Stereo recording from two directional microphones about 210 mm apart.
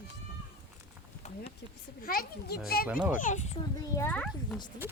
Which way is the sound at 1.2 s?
30° left (ahead or behind).